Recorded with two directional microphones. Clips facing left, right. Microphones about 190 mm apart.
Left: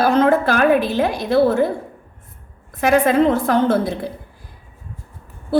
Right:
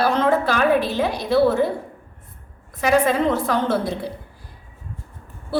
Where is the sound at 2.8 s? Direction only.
50° left (ahead or behind).